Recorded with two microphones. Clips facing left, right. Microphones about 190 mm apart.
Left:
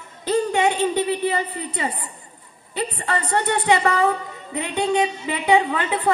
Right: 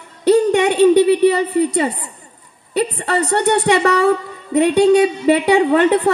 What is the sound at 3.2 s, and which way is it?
A woman's voice, 75° right (ahead or behind).